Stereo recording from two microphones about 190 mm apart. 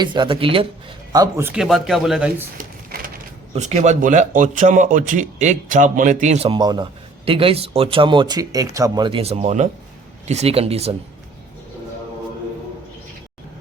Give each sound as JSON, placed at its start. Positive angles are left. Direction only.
{"t": 0.0, "sound": "speech", "side_deg": -25}
{"t": 1.6, "sound": "speech", "side_deg": 0}
{"t": 3.5, "sound": "speech", "side_deg": -35}